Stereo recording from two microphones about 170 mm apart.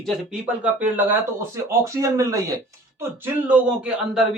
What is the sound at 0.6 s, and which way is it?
Speech, 10° right (ahead or behind).